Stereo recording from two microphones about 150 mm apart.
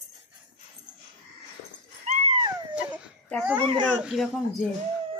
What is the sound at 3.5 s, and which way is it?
Speech, 30° right (ahead or behind).